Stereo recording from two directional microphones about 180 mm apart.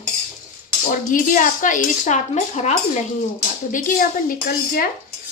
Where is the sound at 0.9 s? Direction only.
50° left (ahead or behind).